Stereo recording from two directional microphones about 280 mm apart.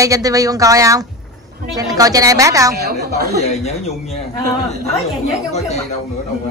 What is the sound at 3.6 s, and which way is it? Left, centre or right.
Speech, left.